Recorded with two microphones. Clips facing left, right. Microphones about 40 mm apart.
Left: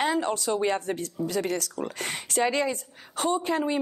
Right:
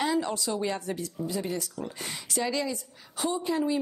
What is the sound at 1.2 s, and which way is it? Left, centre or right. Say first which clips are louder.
Speech: left 5 dB; left.